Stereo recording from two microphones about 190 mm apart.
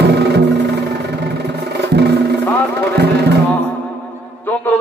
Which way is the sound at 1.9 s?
60° right (ahead or behind).